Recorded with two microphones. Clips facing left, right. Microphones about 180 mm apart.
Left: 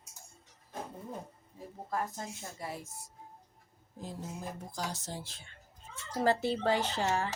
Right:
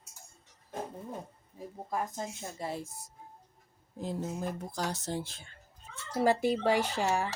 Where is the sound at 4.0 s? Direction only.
65° right (ahead or behind).